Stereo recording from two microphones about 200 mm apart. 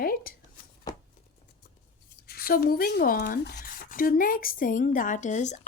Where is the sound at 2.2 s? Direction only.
50° left (ahead or behind).